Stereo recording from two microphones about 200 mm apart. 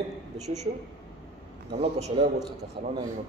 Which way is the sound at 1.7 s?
30° right (ahead or behind).